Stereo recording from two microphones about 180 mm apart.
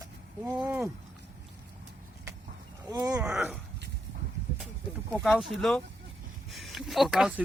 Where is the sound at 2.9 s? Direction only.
20° right (ahead or behind).